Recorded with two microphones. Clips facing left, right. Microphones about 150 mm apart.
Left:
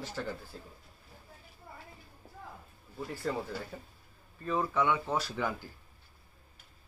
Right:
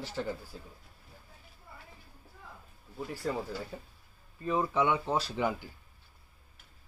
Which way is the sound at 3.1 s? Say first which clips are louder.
Even; 10° right (ahead or behind).